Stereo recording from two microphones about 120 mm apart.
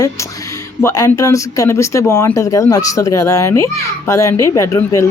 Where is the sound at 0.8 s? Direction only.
25° left (ahead or behind).